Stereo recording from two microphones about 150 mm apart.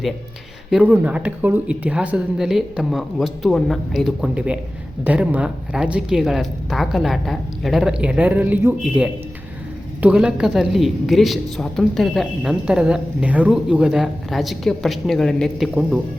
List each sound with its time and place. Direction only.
0.7 s a woman's voice: 10° right (ahead or behind)